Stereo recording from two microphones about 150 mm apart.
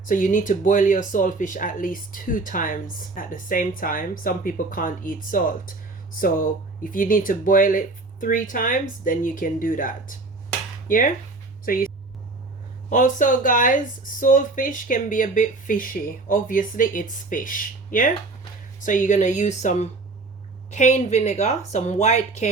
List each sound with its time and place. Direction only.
0.0 s speech: 60° left (ahead or behind)
12.9 s speech: 60° left (ahead or behind)